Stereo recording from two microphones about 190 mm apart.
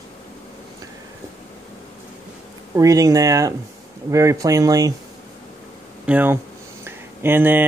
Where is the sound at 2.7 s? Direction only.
15° right (ahead or behind).